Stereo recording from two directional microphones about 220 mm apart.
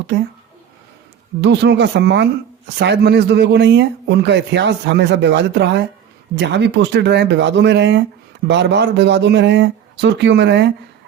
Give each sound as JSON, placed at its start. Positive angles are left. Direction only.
{"t": 1.4, "sound": "a man's voice", "side_deg": -55}